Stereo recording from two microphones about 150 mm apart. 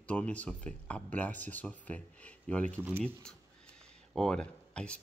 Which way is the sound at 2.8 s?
15° right (ahead or behind).